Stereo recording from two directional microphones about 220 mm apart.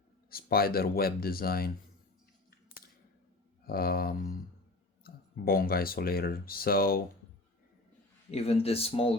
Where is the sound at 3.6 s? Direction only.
45° left (ahead or behind).